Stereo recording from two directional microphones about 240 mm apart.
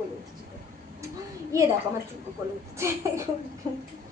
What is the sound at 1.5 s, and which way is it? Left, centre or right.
Speech, centre.